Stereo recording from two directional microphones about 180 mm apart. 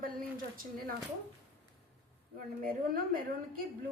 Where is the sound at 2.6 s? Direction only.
50° right (ahead or behind).